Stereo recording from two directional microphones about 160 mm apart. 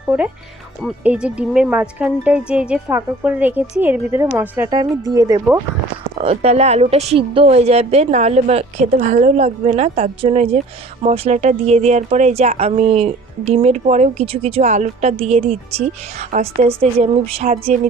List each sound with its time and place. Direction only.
1.0 s a woman's voice: 10° right (ahead or behind)
6.1 s speech: 40° right (ahead or behind)